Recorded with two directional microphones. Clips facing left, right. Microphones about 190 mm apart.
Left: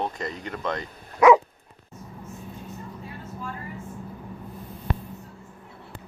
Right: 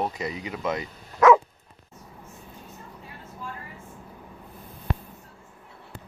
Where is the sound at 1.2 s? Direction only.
15° left (ahead or behind).